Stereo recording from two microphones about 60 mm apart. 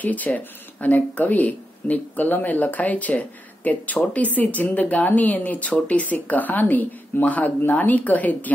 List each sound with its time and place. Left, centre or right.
0.0 s speech: left